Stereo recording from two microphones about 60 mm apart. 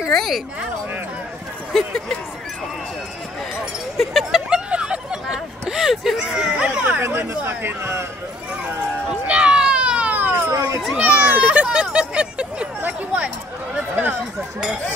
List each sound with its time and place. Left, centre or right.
0.1 s speech: centre
1.7 s speech: centre
3.9 s speech: centre
4.6 s speech: centre
7.0 s speech: right
9.2 s children playing: centre; by 10.5 s right
10.5 s speech: right
11.0 s speech: right